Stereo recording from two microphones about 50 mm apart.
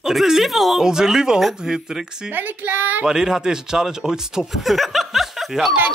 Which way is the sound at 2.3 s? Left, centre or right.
Right.